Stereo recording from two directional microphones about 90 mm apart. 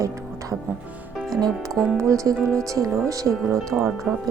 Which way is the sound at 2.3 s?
10° left (ahead or behind).